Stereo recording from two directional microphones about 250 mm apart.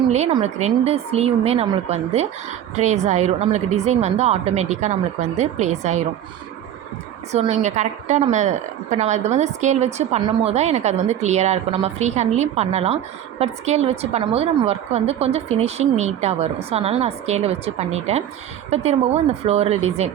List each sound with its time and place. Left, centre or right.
0.1 s a woman's voice: right
7.3 s a woman's voice: right